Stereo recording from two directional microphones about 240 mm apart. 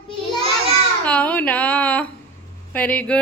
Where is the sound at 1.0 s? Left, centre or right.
Centre.